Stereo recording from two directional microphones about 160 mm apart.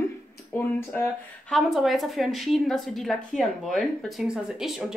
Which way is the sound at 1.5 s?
Centre (ahead or behind).